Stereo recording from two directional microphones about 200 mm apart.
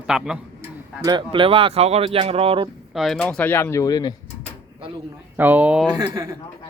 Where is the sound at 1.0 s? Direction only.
20° right (ahead or behind).